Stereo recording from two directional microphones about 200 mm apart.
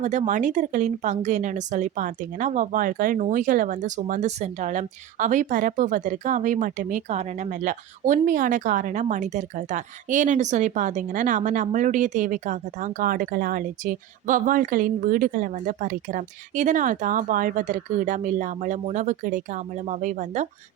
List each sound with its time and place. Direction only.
0.0 s speech: 35° right (ahead or behind)